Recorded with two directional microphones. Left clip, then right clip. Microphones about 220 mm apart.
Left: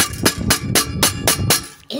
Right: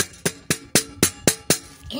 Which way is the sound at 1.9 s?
25° left (ahead or behind).